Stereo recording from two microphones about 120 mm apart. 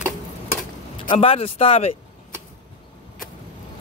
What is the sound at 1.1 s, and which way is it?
Speech, 60° left (ahead or behind).